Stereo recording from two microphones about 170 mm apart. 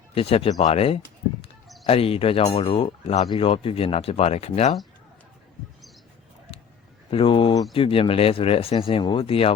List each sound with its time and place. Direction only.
0.1 s speech: 35° left (ahead or behind)
7.1 s speech: 30° left (ahead or behind)